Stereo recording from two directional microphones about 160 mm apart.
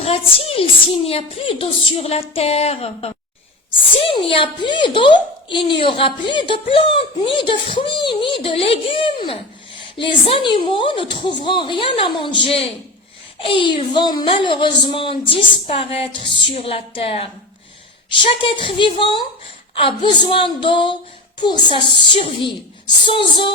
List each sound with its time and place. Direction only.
0.0 s a woman's voice: 40° left (ahead or behind)